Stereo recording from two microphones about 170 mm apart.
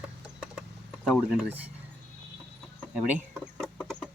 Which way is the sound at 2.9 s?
5° right (ahead or behind).